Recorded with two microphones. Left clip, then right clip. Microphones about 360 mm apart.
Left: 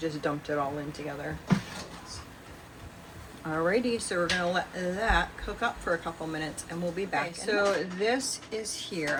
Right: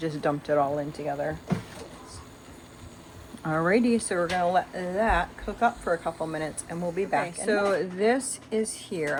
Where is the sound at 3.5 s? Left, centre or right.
Centre.